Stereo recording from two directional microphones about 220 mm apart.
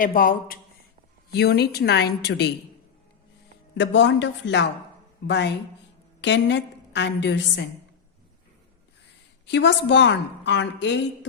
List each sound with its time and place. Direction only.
0.0 s a woman's voice: 40° left (ahead or behind)
3.8 s a woman's voice: 55° left (ahead or behind)
9.5 s a woman's voice: 55° left (ahead or behind)